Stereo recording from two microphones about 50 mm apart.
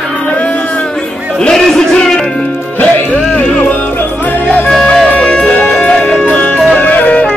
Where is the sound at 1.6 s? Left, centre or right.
Centre.